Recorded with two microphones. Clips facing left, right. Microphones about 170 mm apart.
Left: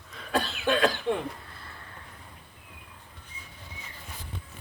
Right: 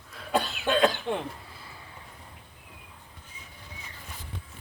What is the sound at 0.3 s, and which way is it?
Cough, 20° right (ahead or behind).